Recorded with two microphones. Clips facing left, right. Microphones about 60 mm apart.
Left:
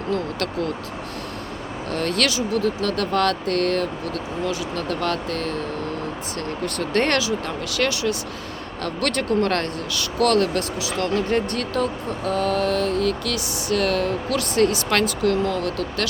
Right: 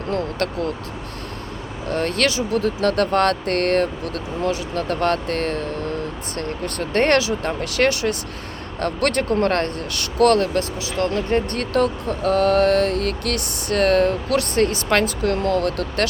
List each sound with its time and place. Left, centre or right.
0.1 s speech: right
1.9 s speech: right
6.7 s speech: right
11.5 s speech: right
11.8 s speech: right
14.8 s speech: right
15.2 s speech: right